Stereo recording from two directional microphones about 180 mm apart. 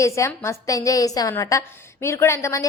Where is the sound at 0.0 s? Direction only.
15° left (ahead or behind).